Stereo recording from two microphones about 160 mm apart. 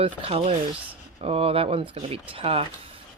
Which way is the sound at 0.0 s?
35° right (ahead or behind).